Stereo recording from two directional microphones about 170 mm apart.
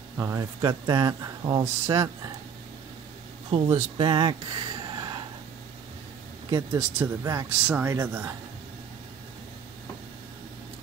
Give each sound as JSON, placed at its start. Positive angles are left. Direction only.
{"t": 0.2, "sound": "speech", "side_deg": -20}
{"t": 3.4, "sound": "speech", "side_deg": -30}
{"t": 6.8, "sound": "speech", "side_deg": -15}